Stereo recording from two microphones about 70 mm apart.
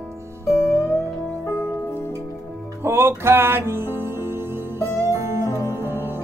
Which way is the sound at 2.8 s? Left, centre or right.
Right.